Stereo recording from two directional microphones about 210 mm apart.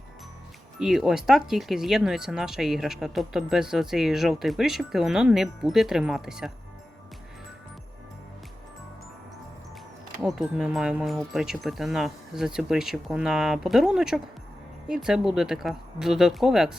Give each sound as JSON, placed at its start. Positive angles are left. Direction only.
{"t": 0.8, "sound": "speech", "side_deg": 0}
{"t": 10.2, "sound": "speech", "side_deg": 0}